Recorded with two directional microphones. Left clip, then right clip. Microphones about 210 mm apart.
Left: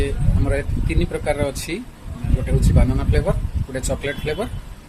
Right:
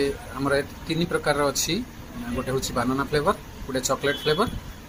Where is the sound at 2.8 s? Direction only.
20° left (ahead or behind).